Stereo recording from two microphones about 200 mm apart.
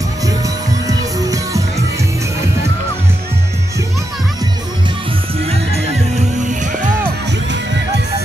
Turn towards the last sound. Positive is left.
turn(degrees=-35)  # may be behind; listen again after turning